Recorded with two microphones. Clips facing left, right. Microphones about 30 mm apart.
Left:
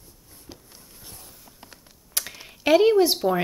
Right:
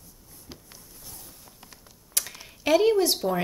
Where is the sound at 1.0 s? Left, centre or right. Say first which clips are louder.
Left 2 dB; left.